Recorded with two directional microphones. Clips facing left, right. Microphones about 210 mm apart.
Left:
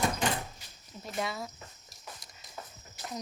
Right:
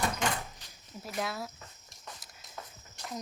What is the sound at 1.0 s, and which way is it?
Speech, centre (ahead or behind).